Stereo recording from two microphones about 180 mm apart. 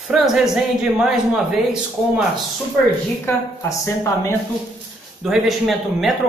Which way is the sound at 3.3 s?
15° left (ahead or behind).